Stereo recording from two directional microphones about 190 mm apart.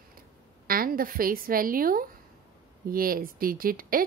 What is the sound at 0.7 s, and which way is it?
A woman's voice, 50° right (ahead or behind).